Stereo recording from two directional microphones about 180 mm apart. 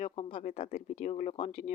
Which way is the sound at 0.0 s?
35° left (ahead or behind).